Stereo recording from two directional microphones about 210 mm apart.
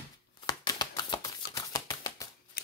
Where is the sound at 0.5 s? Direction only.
20° left (ahead or behind).